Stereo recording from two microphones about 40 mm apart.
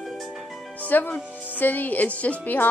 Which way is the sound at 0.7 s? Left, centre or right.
Left.